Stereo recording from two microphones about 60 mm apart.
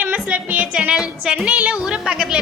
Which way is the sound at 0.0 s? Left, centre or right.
Right.